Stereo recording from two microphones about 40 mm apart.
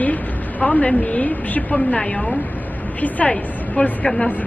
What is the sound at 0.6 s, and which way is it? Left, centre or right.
A woman's voice, left.